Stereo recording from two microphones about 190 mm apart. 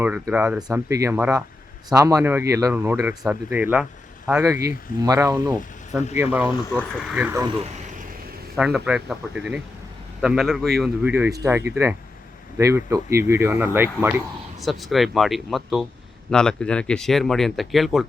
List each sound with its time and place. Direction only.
0.0 s speech: 10° right (ahead or behind)
5.9 s speech: 5° right (ahead or behind)
8.5 s speech: centre (ahead or behind)
14.6 s speech: centre (ahead or behind)